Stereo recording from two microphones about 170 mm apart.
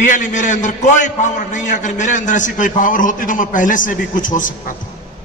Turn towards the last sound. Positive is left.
turn(degrees=50)  # may be behind; listen again after turning